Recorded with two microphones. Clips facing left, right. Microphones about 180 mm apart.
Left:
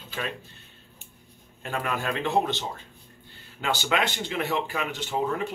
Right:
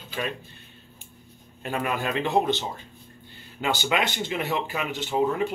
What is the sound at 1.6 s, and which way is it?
Speech, 15° right (ahead or behind).